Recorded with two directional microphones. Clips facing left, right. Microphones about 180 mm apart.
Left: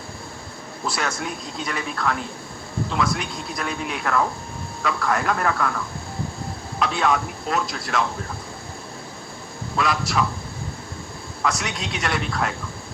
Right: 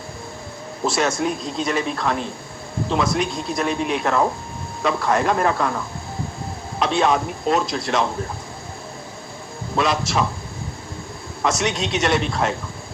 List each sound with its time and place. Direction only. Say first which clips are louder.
0.9 s speech: right 7 dB; 25° right (ahead or behind)
9.7 s speech: right 2 dB; 20° right (ahead or behind)
11.4 s speech: right 5 dB; 20° right (ahead or behind)